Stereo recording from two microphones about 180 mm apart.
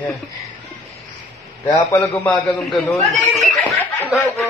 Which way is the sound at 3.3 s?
5° left (ahead or behind).